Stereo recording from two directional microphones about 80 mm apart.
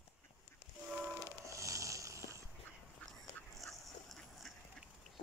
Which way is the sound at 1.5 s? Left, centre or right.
Right.